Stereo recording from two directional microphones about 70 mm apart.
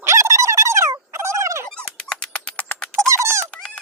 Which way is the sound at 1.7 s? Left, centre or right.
Centre.